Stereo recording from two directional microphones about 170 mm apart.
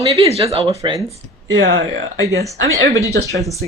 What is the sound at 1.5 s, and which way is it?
Speech, 90° right.